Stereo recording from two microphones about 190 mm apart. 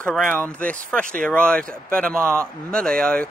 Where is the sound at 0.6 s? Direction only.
5° left (ahead or behind).